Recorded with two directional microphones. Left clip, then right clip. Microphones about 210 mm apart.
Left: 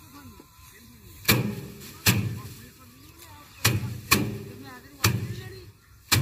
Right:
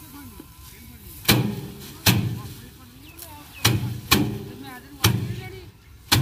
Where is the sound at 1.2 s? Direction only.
5° left (ahead or behind).